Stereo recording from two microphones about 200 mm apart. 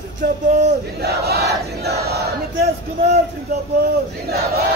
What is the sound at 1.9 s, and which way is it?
Battle cry, 50° right (ahead or behind).